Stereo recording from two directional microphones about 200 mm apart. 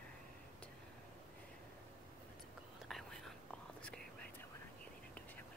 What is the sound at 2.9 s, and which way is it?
Whispering, centre (ahead or behind).